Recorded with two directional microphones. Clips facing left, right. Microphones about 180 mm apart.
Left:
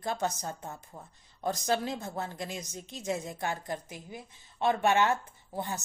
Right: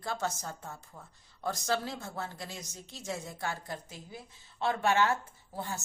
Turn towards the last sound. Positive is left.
turn(degrees=15)  # may be behind; listen again after turning